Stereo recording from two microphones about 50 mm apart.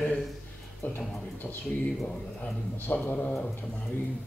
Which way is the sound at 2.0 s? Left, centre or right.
Left.